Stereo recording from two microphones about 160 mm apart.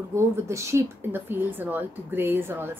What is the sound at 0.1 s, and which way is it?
Speech, 15° right (ahead or behind).